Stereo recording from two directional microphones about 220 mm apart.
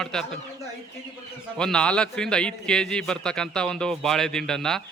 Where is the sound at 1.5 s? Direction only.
5° left (ahead or behind).